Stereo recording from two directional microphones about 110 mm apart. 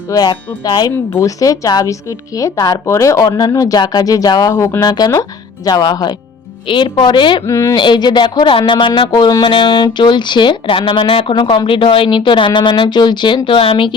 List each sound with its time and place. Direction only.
0.1 s speech: 35° left (ahead or behind)
7.4 s speech: 25° left (ahead or behind)
7.8 s speech: 45° left (ahead or behind)